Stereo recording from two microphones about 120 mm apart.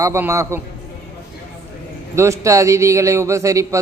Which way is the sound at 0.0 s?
25° right (ahead or behind).